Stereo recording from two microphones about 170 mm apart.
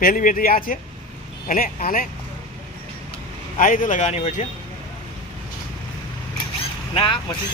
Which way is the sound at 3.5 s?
50° left (ahead or behind).